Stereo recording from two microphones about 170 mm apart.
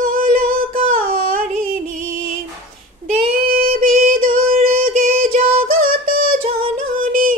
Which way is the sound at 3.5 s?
55° right (ahead or behind).